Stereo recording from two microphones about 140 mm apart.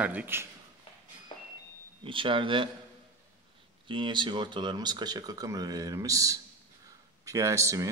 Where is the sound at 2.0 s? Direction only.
35° right (ahead or behind).